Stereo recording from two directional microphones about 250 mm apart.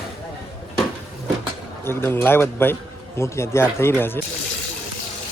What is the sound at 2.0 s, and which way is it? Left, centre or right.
Speech, centre.